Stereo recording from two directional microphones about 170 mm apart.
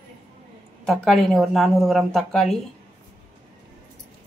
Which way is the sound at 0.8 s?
Centre (ahead or behind).